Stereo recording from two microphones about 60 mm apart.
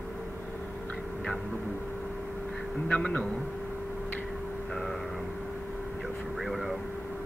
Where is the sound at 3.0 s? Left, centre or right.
Centre.